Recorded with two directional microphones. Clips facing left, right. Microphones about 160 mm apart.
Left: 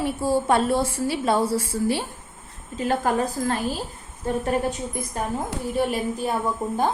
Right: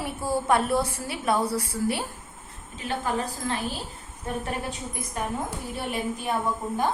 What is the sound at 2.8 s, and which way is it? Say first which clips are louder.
A woman's voice: left 6 dB; 45° left (ahead or behind).